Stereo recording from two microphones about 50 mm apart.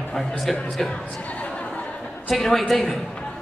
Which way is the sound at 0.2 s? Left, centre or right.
Centre.